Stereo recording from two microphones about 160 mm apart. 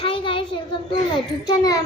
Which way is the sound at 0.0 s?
35° left (ahead or behind).